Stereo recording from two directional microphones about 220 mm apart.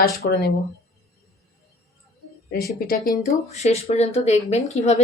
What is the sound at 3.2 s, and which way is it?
A woman's voice, 30° left (ahead or behind).